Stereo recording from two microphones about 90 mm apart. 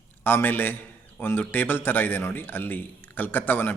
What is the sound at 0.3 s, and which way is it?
A man's voice, 25° left (ahead or behind).